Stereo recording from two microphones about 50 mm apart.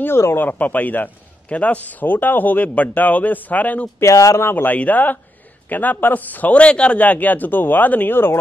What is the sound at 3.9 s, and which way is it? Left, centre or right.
Speech, left.